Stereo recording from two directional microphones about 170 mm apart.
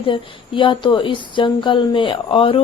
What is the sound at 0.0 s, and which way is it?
Speech, 30° left (ahead or behind).